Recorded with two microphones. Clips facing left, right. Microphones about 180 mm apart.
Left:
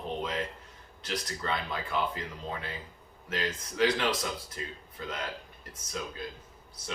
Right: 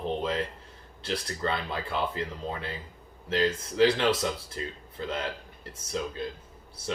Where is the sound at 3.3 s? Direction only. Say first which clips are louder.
Right 7 dB; 30° right (ahead or behind).